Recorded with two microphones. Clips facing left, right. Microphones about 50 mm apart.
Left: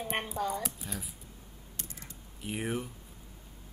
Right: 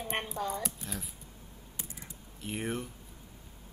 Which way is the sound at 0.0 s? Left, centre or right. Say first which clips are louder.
Left 1 dB; centre.